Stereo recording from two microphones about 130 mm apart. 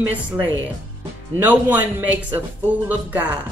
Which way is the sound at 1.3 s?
15° right (ahead or behind).